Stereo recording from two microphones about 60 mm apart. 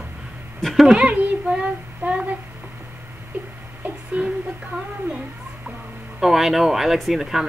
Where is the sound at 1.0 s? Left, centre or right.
Centre.